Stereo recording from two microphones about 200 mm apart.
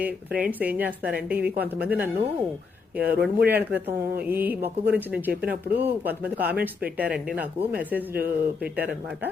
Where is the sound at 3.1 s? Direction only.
55° right (ahead or behind).